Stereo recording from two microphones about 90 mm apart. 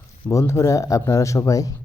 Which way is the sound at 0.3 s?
35° left (ahead or behind).